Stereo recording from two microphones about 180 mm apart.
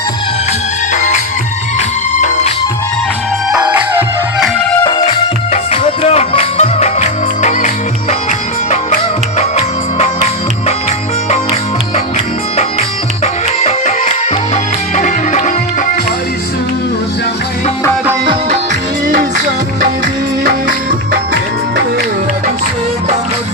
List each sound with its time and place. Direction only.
3.5 s music: 10° right (ahead or behind)
5.5 s music: 35° left (ahead or behind)
9.4 s music: 35° left (ahead or behind)
13.2 s music: 35° left (ahead or behind)
20.4 s music: 55° right (ahead or behind)